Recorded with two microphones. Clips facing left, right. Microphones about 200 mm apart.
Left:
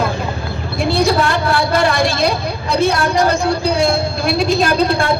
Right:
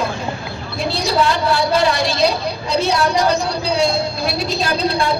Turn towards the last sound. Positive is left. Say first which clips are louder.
# left 5 dB
turn(degrees=50)  # may be behind; listen again after turning